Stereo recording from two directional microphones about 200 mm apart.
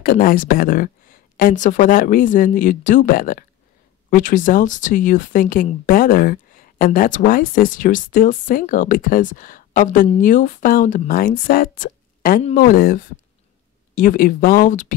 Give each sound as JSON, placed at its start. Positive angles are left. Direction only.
{"t": 0.0, "sound": "speech", "side_deg": 45}